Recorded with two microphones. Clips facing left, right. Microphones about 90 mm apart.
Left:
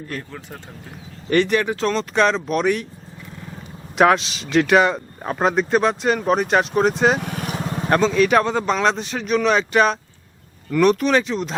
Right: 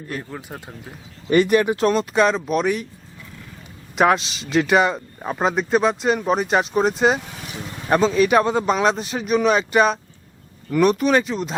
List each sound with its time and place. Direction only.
0.2 s speech: 15° right (ahead or behind)
3.9 s speech: centre (ahead or behind)
7.2 s vehicle: 60° left (ahead or behind)
7.9 s speech: 5° right (ahead or behind)